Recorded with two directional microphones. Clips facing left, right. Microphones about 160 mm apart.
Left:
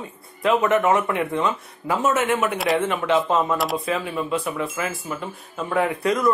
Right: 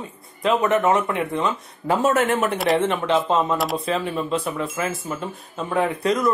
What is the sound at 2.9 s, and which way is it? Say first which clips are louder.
Speech: even; 20° right (ahead or behind).